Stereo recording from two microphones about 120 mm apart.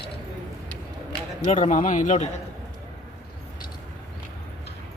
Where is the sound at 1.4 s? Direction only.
90° left.